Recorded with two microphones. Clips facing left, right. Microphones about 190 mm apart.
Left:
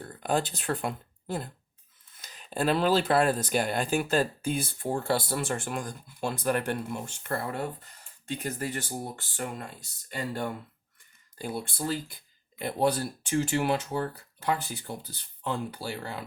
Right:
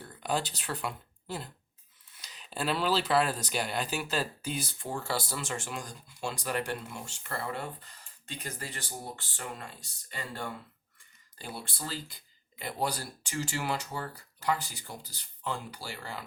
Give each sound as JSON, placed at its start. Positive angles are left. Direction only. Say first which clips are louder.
{"t": 0.0, "sound": "speech", "louder": "left 4 dB", "side_deg": 50}
{"t": 11.3, "sound": "speech", "louder": "left 7 dB", "side_deg": 50}